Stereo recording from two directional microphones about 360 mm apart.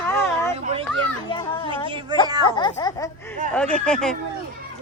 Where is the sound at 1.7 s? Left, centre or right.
Centre.